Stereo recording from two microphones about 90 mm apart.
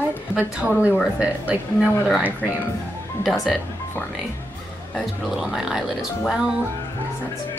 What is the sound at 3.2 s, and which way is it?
Speech, centre (ahead or behind).